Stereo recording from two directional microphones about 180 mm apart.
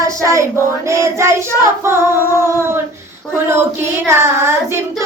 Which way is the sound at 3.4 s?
15° right (ahead or behind).